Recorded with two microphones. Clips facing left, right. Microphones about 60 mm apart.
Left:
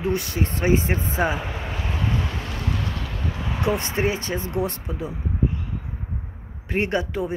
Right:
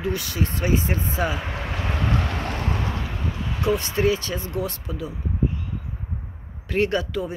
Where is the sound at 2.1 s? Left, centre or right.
Right.